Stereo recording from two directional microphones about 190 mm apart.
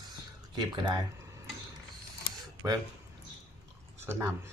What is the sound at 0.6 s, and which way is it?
Speech, 20° right (ahead or behind).